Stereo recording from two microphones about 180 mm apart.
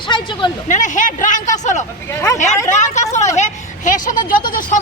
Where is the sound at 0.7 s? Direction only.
45° left (ahead or behind).